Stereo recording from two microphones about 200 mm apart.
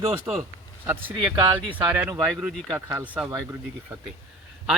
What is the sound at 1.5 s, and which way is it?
Speech, 10° right (ahead or behind).